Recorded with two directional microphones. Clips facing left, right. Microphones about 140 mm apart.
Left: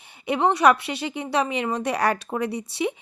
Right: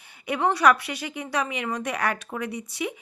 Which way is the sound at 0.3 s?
25° left (ahead or behind).